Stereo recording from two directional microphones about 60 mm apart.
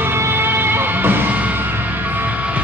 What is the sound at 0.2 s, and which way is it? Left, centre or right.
Music, right.